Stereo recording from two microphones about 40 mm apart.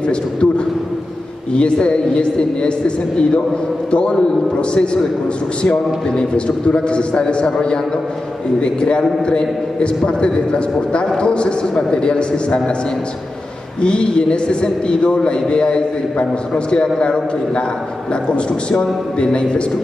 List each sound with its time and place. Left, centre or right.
0.0 s a man's voice: left
1.5 s a man's voice: left
3.9 s a man's voice: left
13.7 s a man's voice: left